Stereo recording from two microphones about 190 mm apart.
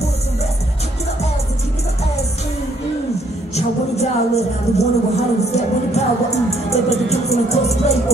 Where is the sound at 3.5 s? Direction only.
35° left (ahead or behind).